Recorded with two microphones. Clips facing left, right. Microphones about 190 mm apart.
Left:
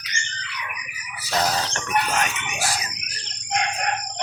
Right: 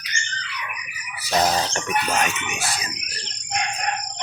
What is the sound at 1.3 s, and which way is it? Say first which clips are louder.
Chicken: right 3 dB; 15° right (ahead or behind).